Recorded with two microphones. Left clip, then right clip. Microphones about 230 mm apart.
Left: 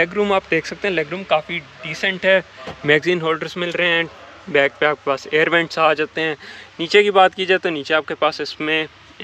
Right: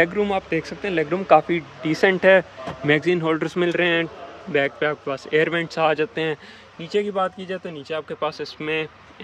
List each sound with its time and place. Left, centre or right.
0.0 s speech: centre
1.2 s a man's voice: right; by 6.9 s centre
6.9 s speech: centre